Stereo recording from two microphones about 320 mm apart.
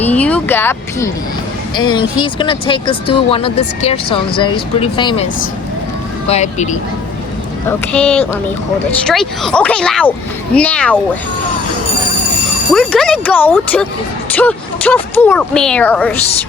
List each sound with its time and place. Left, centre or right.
0.0 s a sound: centre
1.7 s speech: centre
7.7 s speech: centre
12.7 s speech: centre